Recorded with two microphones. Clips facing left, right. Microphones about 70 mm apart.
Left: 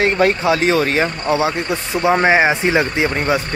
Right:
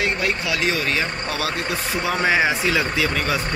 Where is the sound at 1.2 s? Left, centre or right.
Left.